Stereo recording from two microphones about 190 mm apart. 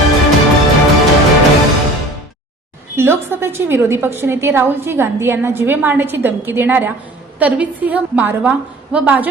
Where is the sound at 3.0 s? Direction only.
10° right (ahead or behind).